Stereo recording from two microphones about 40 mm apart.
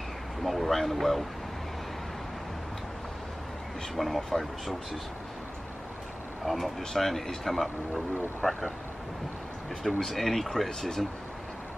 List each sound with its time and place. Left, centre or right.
0.4 s speech: centre
3.9 s speech: centre
6.4 s speech: centre
9.9 s speech: centre